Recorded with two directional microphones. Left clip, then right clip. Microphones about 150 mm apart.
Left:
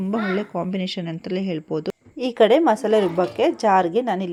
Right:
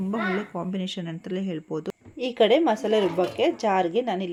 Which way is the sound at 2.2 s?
30° left (ahead or behind).